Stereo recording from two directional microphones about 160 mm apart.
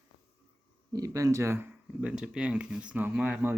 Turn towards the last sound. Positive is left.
turn(degrees=-10)  # may be behind; listen again after turning